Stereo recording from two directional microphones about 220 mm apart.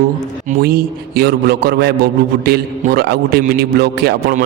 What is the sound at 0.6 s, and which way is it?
A man's voice, 45° right (ahead or behind).